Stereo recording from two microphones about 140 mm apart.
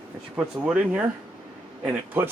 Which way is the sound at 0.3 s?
5° right (ahead or behind).